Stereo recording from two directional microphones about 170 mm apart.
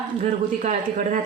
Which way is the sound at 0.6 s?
50° right (ahead or behind).